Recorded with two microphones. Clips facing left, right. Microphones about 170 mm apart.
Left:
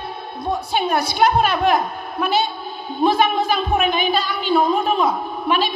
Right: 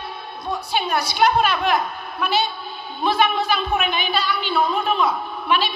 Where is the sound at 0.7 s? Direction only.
50° left (ahead or behind).